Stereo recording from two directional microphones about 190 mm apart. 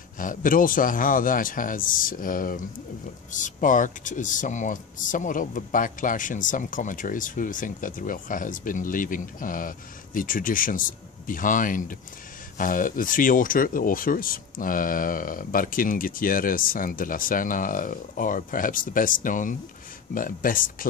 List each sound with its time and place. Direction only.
0.2 s speech: 45° left (ahead or behind)